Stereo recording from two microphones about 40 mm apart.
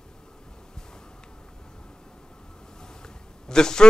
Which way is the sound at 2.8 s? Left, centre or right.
Centre.